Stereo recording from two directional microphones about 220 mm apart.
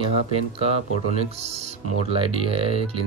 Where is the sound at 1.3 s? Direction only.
30° right (ahead or behind).